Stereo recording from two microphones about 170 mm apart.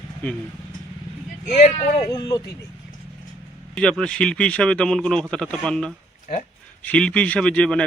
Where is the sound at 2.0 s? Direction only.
20° left (ahead or behind).